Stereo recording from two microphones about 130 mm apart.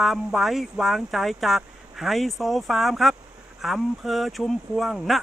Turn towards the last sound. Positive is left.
turn(degrees=0)  # may be behind; listen again after turning